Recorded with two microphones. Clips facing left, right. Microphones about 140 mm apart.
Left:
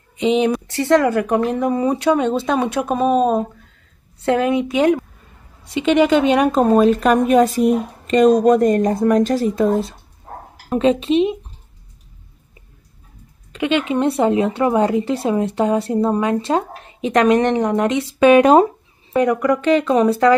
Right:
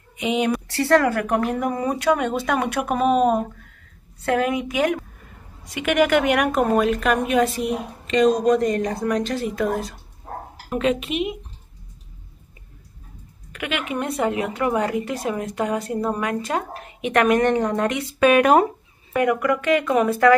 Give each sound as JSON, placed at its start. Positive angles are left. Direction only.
{"t": 0.2, "sound": "a woman's voice", "side_deg": 25}
{"t": 9.7, "sound": "a woman's voice", "side_deg": 30}
{"t": 13.5, "sound": "a woman's voice", "side_deg": 25}